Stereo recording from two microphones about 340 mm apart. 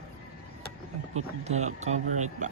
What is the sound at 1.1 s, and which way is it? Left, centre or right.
Speech, centre.